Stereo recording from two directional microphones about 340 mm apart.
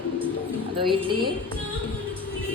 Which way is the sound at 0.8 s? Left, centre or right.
Centre.